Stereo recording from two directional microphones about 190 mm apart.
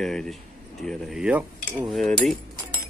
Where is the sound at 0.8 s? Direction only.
Centre (ahead or behind).